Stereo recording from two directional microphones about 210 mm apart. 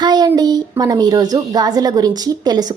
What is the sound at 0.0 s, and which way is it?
A woman's voice, 20° right (ahead or behind).